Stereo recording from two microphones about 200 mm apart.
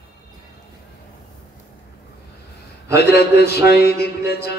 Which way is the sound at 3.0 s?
55° left (ahead or behind).